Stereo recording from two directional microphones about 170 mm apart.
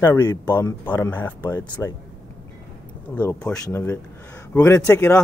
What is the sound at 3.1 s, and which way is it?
Speech, 5° left (ahead or behind).